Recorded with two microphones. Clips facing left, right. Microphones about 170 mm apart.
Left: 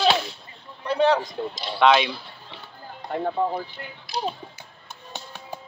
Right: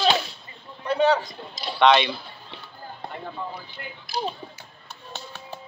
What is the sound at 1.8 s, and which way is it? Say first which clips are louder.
Speech: even; 5° left (ahead or behind).